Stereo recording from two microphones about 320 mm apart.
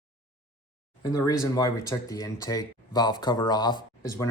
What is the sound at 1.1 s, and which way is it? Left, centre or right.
Speech, centre.